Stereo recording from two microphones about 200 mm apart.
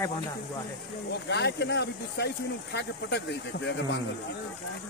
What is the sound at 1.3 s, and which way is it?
Speech, 55° left (ahead or behind).